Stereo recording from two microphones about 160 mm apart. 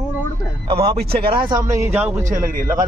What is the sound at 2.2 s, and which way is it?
Speech, 60° right (ahead or behind).